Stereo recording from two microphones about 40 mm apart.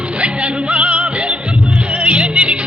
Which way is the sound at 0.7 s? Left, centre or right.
Right.